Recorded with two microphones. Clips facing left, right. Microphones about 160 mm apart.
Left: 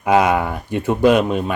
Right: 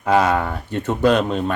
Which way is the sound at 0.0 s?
15° left (ahead or behind).